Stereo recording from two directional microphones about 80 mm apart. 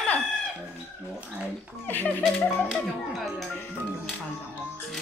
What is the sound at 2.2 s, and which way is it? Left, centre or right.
Speech, centre.